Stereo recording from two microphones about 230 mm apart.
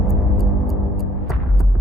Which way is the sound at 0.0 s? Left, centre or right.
Centre.